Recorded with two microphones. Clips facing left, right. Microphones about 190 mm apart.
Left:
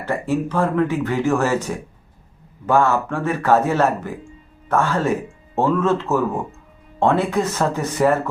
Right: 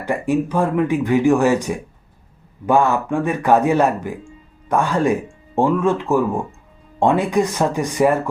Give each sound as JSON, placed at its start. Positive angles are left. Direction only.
{"t": 0.0, "sound": "speech", "side_deg": -15}